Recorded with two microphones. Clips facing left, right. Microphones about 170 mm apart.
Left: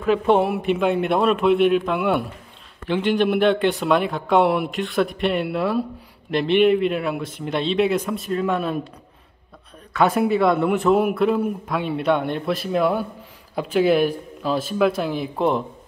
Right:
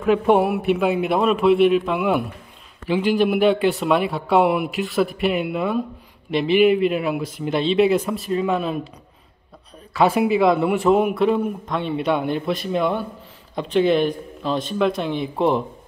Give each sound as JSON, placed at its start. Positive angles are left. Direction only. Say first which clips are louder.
{"t": 0.0, "sound": "a man's voice", "louder": "right 1 dB", "side_deg": -5}
{"t": 9.9, "sound": "a man's voice", "louder": "right 1 dB", "side_deg": 0}